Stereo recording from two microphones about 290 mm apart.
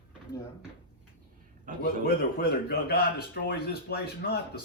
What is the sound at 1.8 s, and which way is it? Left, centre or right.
Speech, left.